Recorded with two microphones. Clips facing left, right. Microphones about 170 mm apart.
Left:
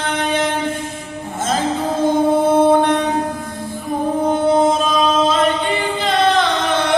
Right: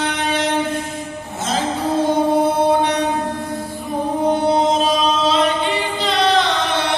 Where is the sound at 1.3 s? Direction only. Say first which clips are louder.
Left 2 dB; 50° left (ahead or behind).